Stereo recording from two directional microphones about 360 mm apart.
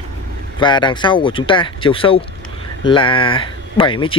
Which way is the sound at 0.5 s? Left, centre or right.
Centre.